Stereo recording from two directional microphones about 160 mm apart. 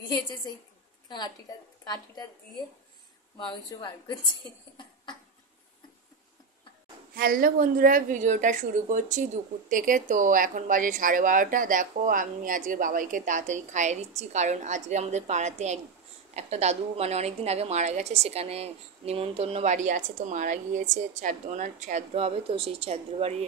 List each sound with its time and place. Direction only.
1.0 s a woman's voice: 25° left (ahead or behind)
7.2 s a woman's voice: 65° right (ahead or behind); by 23.3 s 40° right (ahead or behind)